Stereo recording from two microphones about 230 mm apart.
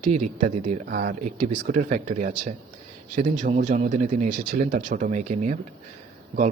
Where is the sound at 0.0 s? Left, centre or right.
Right.